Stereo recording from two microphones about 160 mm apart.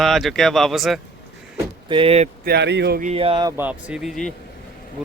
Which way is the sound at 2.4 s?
85° right.